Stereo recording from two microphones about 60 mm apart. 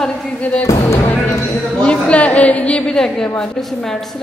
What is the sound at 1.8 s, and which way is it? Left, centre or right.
A woman's voice, centre.